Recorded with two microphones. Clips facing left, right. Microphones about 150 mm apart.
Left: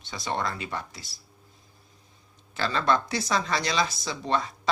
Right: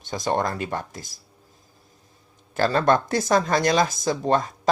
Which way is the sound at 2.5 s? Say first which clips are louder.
Right 6 dB; 45° right (ahead or behind).